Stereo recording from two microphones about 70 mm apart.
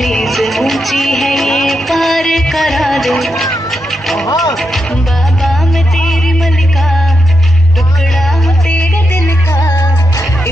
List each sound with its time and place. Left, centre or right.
0.0 s music: centre
3.7 s vehicle: centre
5.4 s music: centre
9.1 s music: left
9.8 s music: left